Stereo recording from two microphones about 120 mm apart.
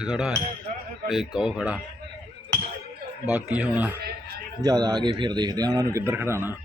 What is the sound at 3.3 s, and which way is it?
Speech, 10° right (ahead or behind).